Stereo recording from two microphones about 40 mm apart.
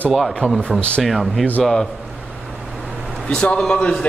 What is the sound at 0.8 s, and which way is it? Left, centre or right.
Speech, left.